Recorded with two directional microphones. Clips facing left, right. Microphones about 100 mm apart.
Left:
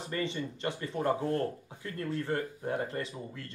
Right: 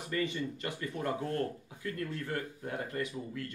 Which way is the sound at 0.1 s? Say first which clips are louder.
Right 1 dB; 30° left (ahead or behind).